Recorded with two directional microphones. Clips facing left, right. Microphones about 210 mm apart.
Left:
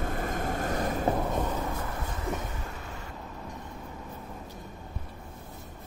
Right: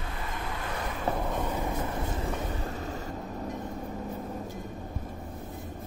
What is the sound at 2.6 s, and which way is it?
Vehicle, 35° right (ahead or behind).